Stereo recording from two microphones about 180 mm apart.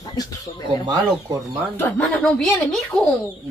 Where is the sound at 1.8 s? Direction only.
5° left (ahead or behind).